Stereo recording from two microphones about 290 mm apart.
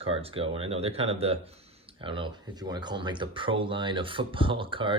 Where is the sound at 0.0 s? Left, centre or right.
Centre.